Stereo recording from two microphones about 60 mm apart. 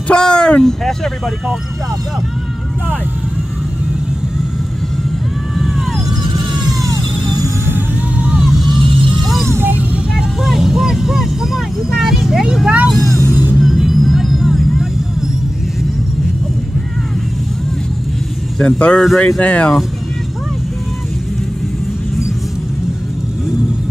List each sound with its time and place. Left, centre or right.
0.1 s speech: centre
6.8 s music: right
8.2 s vehicle: centre
9.2 s music: centre
9.5 s music: right
10.1 s speech: centre
12.9 s speech: centre
13.6 s vehicle: centre
18.6 s speech: centre